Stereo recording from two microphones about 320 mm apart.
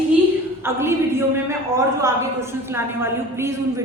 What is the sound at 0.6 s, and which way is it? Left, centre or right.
A woman's voice, centre.